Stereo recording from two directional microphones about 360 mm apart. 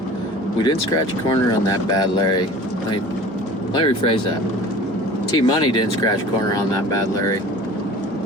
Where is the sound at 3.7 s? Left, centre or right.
Centre.